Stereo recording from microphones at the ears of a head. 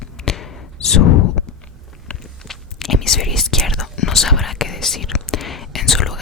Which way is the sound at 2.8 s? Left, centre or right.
Left.